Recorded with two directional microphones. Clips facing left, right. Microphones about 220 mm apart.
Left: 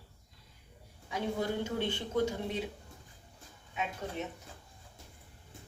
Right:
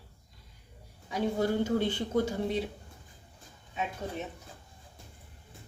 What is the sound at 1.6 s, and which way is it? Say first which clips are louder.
Speech: right 6 dB; 40° right (ahead or behind).